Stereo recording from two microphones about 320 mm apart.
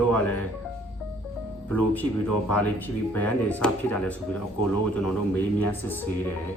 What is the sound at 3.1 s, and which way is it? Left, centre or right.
Speech, centre.